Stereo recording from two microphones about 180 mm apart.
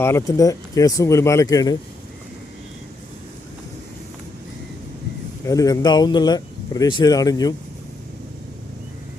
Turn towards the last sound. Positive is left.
turn(degrees=20)  # may be behind; listen again after turning